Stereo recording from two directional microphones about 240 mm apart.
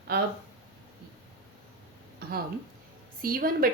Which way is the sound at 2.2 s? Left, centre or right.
Right.